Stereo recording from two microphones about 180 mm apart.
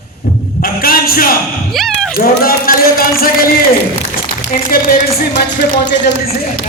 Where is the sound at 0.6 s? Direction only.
55° left (ahead or behind).